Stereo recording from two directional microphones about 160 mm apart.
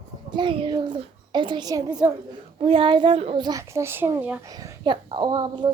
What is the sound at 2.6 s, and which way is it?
Speech, 35° right (ahead or behind).